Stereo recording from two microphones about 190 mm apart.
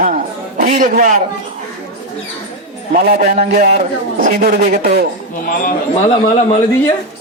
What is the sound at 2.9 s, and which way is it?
Speech, 45° right (ahead or behind).